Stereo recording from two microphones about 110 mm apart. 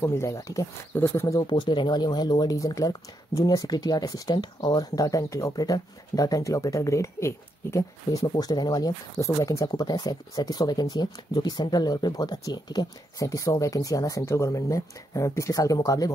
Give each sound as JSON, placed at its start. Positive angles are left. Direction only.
{"t": 0.0, "sound": "speech", "side_deg": 25}
{"t": 1.2, "sound": "speech", "side_deg": 35}
{"t": 1.5, "sound": "speech", "side_deg": 45}